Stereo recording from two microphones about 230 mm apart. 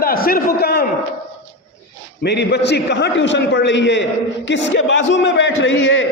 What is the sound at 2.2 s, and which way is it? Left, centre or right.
A man's voice, left.